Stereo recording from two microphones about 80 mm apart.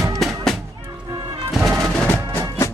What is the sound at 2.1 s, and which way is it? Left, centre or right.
Music, left.